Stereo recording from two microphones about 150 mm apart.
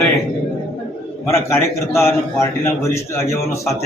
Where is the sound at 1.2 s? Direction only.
15° left (ahead or behind).